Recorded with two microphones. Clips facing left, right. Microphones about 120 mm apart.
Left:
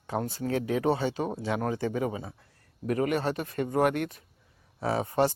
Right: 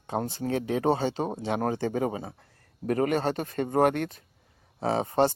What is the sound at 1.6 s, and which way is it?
Speech, 35° right (ahead or behind).